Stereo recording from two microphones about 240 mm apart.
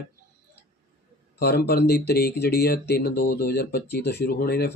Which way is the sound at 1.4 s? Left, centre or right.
Left.